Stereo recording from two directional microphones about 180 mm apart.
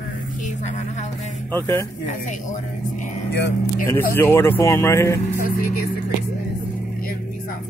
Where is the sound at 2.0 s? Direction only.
45° left (ahead or behind).